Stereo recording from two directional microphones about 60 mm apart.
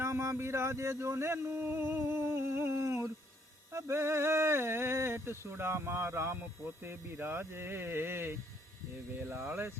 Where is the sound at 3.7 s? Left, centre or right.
Right.